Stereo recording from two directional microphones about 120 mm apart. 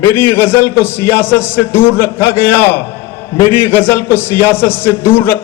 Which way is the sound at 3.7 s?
20° left (ahead or behind).